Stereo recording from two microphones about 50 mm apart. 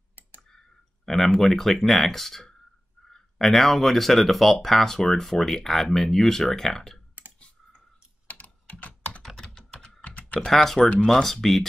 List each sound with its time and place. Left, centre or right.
1.0 s speech: centre
8.3 s computer keyboard: left
9.2 s typing: centre
10.0 s typing: left
10.5 s speech: centre
10.8 s speech: left
11.1 s speech: centre